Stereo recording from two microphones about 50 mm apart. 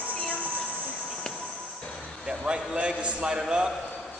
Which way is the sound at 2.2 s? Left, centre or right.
Centre.